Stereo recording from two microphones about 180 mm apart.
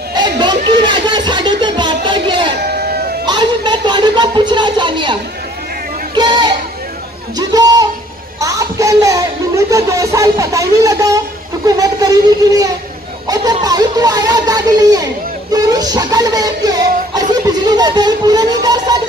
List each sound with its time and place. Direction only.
0.1 s music: 25° right (ahead or behind)
2.6 s sheep: 65° right (ahead or behind)
3.3 s a sound: 25° right (ahead or behind)
6.1 s a sound: 25° right (ahead or behind)
9.7 s speech: 20° right (ahead or behind)
15.5 s music: 20° right (ahead or behind)